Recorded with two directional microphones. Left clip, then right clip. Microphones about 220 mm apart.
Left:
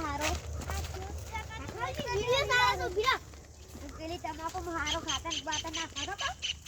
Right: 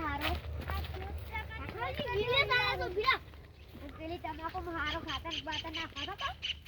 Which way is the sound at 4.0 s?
5° left (ahead or behind).